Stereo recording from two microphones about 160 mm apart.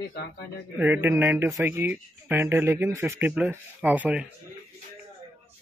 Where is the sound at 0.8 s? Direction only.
15° right (ahead or behind).